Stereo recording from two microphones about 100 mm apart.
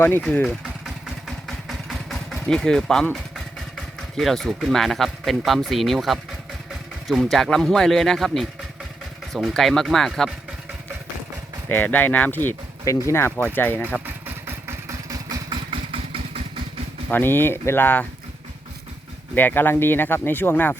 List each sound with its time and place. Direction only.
0.2 s speech: 10° left (ahead or behind)
1.5 s vehicle: centre (ahead or behind)
7.1 s speech: centre (ahead or behind)
11.7 s speech: 20° left (ahead or behind)
12.8 s speech: 30° left (ahead or behind)
14.0 s vehicle: 20° right (ahead or behind)
15.7 s vehicle: 70° right (ahead or behind)
17.1 s speech: 20° left (ahead or behind)
19.3 s speech: 20° left (ahead or behind)